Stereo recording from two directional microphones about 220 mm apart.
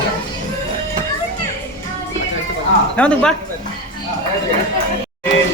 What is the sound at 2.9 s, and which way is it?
Speech, 5° left (ahead or behind).